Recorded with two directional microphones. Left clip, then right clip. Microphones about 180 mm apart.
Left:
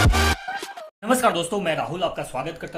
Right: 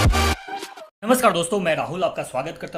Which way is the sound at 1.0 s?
35° right (ahead or behind).